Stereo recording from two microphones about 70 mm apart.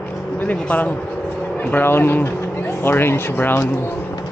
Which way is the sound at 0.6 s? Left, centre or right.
Left.